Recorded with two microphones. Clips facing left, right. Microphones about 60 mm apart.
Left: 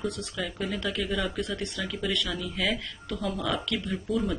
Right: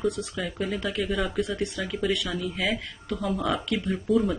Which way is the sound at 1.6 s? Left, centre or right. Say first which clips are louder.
Right 4 dB; centre.